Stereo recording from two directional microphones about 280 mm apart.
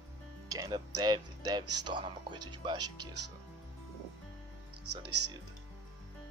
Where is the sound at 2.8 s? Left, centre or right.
Right.